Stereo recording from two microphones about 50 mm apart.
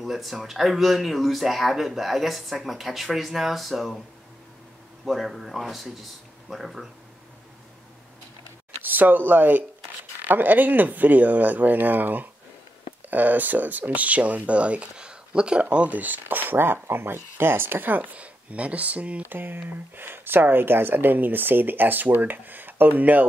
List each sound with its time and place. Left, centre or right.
0.0 s speech: centre
5.0 s speech: centre
8.8 s speech: right; by 15.6 s centre
15.6 s speech: right
19.2 s speech: right